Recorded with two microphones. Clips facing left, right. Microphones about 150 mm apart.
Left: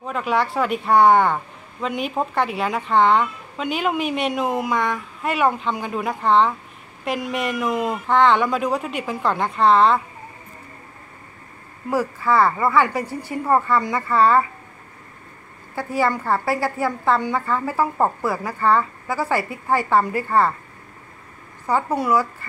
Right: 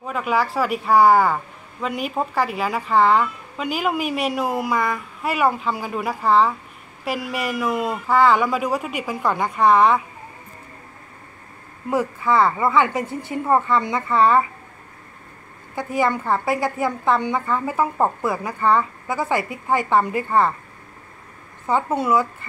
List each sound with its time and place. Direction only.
0.0 s speech: centre (ahead or behind)
11.9 s a woman's voice: 20° right (ahead or behind)
15.7 s a woman's voice: 20° right (ahead or behind)
21.6 s a woman's voice: 20° right (ahead or behind)